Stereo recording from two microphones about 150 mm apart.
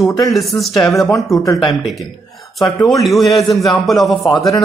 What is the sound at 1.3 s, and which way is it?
Speech, 20° left (ahead or behind).